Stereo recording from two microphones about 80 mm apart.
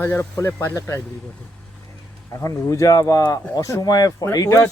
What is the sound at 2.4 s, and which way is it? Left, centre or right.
Speech, left.